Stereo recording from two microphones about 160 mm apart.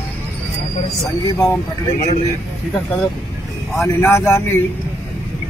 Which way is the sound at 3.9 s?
15° left (ahead or behind).